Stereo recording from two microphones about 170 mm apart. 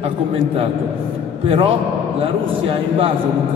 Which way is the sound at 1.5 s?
35° right (ahead or behind).